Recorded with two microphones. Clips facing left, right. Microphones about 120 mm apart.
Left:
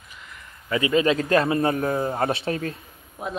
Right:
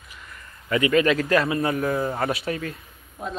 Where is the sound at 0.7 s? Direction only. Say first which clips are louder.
Right 1 dB; 25° left (ahead or behind).